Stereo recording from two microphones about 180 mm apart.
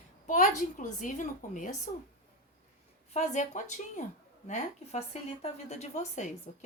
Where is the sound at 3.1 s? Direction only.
40° left (ahead or behind).